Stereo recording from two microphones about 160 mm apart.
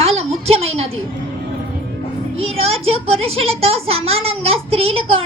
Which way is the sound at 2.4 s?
40° right (ahead or behind).